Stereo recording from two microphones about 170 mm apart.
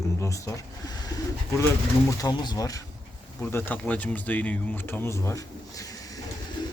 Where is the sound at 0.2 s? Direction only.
20° left (ahead or behind).